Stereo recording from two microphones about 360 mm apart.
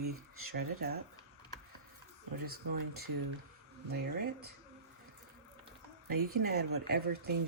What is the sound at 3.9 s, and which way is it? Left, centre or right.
Speech, right.